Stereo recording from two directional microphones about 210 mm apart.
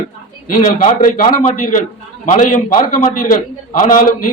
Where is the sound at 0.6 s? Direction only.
40° left (ahead or behind).